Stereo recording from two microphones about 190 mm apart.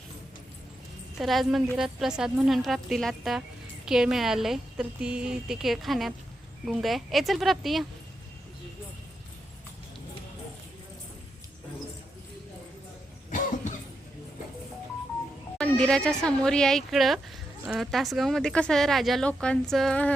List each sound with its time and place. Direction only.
1.2 s speech: centre (ahead or behind)
13.3 s cough: 40° left (ahead or behind)
15.5 s speech: 5° left (ahead or behind)